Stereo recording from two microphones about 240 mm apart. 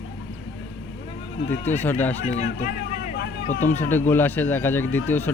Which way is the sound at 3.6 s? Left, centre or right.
Centre.